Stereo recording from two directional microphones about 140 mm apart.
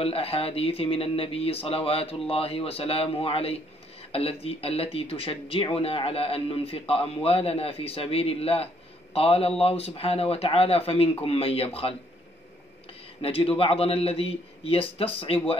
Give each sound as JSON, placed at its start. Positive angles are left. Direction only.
{"t": 0.0, "sound": "speech", "side_deg": 45}
{"t": 13.2, "sound": "speech", "side_deg": 40}